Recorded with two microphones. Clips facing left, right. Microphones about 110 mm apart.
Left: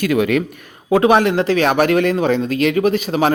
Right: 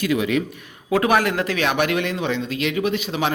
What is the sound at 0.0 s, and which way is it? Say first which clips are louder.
Speech: left 5 dB; 55° left (ahead or behind).